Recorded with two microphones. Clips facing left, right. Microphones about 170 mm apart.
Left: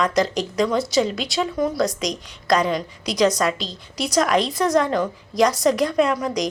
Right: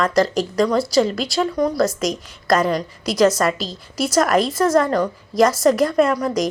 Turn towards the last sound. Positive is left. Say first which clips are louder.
# right 3 dB
turn(degrees=0)  # may be behind; listen again after turning